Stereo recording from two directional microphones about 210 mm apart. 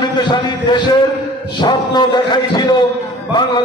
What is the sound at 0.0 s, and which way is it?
A man's voice, 20° left (ahead or behind).